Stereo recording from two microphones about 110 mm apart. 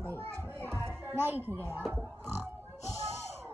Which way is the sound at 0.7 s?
25° right (ahead or behind).